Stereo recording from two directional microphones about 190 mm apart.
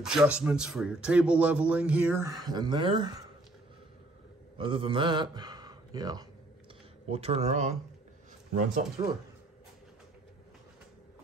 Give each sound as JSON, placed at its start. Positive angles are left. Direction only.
{"t": 0.0, "sound": "speech", "side_deg": -5}
{"t": 4.6, "sound": "a man's voice", "side_deg": -25}
{"t": 7.1, "sound": "speech", "side_deg": -30}
{"t": 9.0, "sound": "speech", "side_deg": -30}